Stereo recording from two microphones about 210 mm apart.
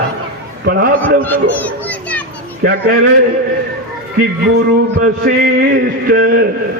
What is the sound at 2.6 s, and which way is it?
Speech, 40° right (ahead or behind).